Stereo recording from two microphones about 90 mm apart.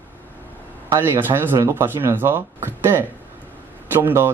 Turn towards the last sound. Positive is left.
turn(degrees=-25)  # may be behind; listen again after turning